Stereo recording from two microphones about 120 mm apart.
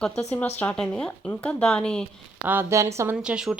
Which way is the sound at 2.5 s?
20° right (ahead or behind).